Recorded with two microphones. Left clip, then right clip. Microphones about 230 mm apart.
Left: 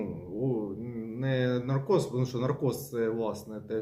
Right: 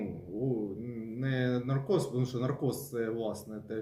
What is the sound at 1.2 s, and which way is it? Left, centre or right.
A man's voice, centre.